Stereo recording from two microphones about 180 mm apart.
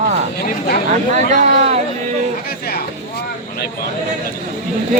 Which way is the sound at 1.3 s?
40° right (ahead or behind).